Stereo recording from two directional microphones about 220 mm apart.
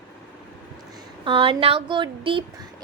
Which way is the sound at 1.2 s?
25° right (ahead or behind).